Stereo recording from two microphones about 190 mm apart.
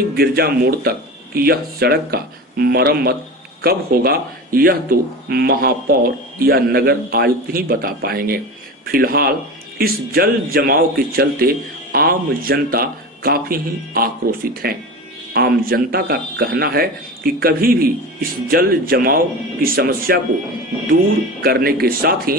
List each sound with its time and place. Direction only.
0.1 s speech: 55° right (ahead or behind)